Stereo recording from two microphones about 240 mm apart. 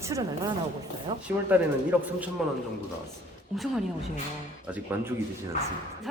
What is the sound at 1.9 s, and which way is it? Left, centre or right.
Speech, centre.